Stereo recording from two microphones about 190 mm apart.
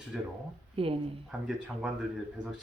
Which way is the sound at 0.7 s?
30° right (ahead or behind).